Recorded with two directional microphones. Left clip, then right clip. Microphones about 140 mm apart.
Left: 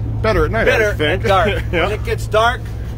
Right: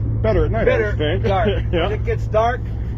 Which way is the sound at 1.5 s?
15° left (ahead or behind).